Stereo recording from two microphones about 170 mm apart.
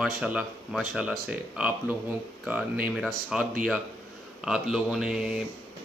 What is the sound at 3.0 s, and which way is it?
Speech, centre (ahead or behind).